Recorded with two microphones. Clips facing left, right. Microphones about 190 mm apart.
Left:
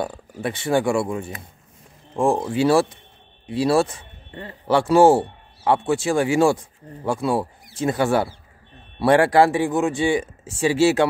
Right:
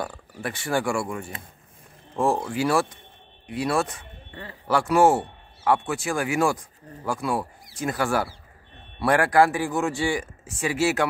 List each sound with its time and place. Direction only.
0.0 s speech: 20° left (ahead or behind)